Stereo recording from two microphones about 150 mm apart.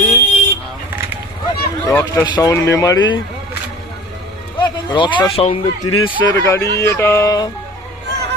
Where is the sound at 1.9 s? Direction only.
20° left (ahead or behind).